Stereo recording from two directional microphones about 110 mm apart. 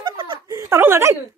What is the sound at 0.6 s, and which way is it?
Chuckle, 25° right (ahead or behind).